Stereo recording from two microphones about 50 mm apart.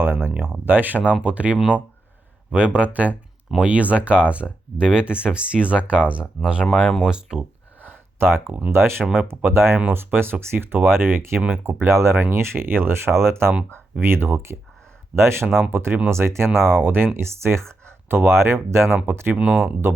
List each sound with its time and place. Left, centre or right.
0.0 s a sound: right
0.3 s speech: right; by 7.4 s centre
7.8 s a sound: right
8.7 s speech: right
9.7 s speech: right
12.3 s speech: right
17.2 s speech: right
19.5 s speech: right